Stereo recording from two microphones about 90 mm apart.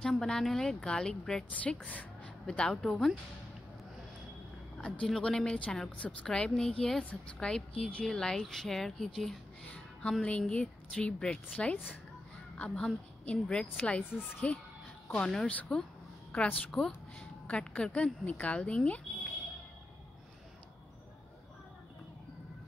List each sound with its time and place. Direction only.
0.0 s a woman's voice: 5° left (ahead or behind)
4.7 s a woman's voice: 10° left (ahead or behind)
10.5 s a woman's voice: 15° left (ahead or behind)